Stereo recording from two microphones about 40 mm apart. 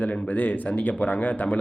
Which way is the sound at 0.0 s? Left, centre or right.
Left.